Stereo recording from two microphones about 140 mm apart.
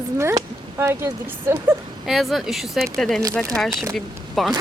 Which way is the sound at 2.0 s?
Centre (ahead or behind).